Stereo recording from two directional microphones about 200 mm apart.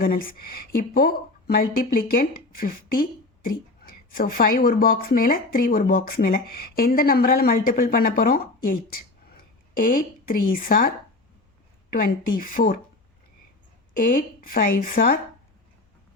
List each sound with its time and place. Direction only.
0.0 s speech: 45° left (ahead or behind)
13.9 s speech: 45° left (ahead or behind)